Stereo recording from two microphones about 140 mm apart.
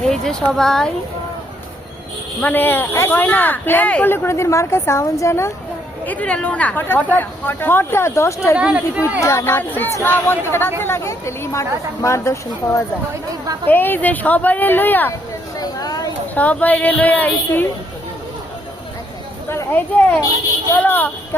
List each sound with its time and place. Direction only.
0.0 s speech: 5° left (ahead or behind)
2.4 s speech: 15° left (ahead or behind)
6.1 s speech: 10° left (ahead or behind)
8.5 s speech: 5° right (ahead or behind)
9.2 s speech: 20° left (ahead or behind)
15.5 s a sound: 30° left (ahead or behind)
16.3 s speech: 10° left (ahead or behind)
19.5 s speech: 15° left (ahead or behind)